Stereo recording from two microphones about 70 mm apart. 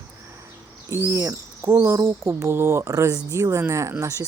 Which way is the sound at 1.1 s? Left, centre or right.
Right.